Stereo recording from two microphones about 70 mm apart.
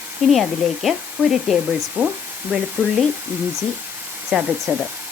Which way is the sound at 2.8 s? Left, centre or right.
Right.